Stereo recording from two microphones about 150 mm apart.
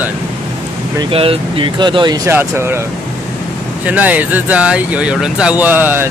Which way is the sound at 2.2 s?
15° right (ahead or behind).